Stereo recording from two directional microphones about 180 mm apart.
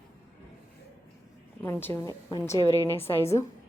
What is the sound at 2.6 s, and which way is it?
Speech, 20° left (ahead or behind).